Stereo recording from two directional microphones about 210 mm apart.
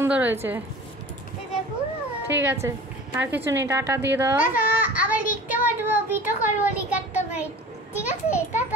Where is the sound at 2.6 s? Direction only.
5° right (ahead or behind).